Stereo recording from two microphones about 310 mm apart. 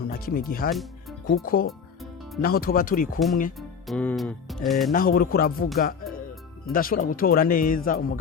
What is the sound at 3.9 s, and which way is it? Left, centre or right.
Music, centre.